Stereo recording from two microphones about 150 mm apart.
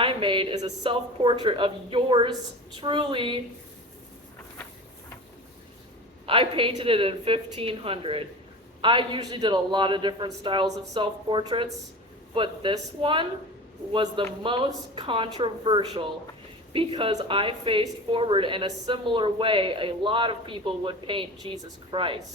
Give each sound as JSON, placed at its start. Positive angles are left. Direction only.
{"t": 0.0, "sound": "a sound", "side_deg": -35}
{"t": 0.6, "sound": "a woman's voice", "side_deg": -30}
{"t": 6.2, "sound": "a woman's voice", "side_deg": -35}